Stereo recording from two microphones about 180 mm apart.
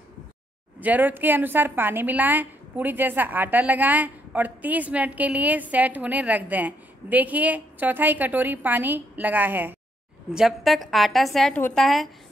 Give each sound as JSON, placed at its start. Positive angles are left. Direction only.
{"t": 0.7, "sound": "a woman's voice", "side_deg": -10}